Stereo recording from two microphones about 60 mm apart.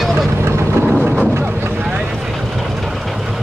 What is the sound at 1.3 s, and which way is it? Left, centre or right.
Boat, right.